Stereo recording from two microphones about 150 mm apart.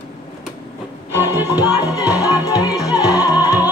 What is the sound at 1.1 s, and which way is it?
Music, 15° right (ahead or behind).